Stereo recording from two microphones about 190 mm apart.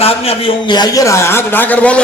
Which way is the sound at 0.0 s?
30° left (ahead or behind).